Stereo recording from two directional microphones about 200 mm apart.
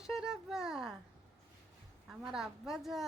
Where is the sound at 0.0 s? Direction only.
Centre (ahead or behind).